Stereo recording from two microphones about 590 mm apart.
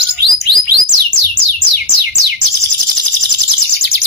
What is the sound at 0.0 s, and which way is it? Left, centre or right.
Bird, right.